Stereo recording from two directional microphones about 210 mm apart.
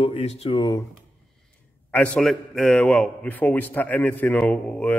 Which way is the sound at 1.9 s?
5° left (ahead or behind).